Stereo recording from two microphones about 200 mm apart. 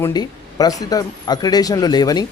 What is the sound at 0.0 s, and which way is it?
Speech, 20° left (ahead or behind).